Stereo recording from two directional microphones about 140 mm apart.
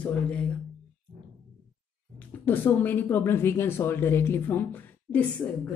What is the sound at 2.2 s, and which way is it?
Speech, 15° left (ahead or behind).